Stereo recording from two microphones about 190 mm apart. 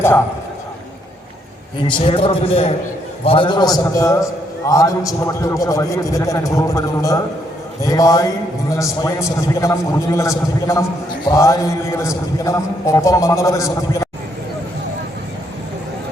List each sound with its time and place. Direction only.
1.9 s a man's voice: 25° left (ahead or behind)